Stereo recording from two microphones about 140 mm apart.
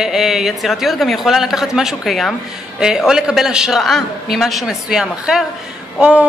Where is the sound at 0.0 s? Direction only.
5° right (ahead or behind).